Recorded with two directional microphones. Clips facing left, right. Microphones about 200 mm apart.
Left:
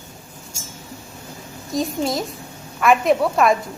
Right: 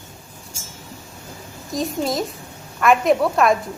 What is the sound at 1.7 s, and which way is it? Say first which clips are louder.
A woman's voice: even; centre (ahead or behind).